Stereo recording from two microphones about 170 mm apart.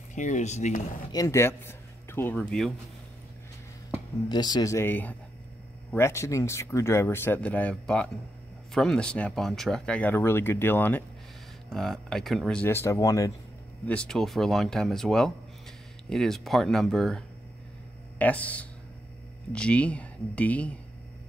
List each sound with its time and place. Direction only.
0.1 s speech: 45° left (ahead or behind)
1.1 s speech: 20° left (ahead or behind)
4.3 s speech: 25° left (ahead or behind); by 12.6 s centre (ahead or behind)
12.6 s speech: 15° left (ahead or behind)
13.8 s speech: 5° left (ahead or behind)
18.2 s speech: 10° left (ahead or behind)